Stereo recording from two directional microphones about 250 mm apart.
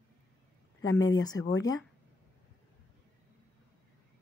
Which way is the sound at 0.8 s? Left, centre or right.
Left.